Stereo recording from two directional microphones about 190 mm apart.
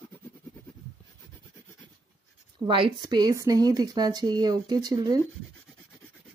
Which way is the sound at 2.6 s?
25° right (ahead or behind).